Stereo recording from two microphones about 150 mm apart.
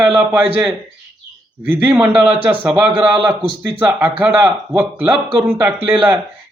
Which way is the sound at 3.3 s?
10° right (ahead or behind).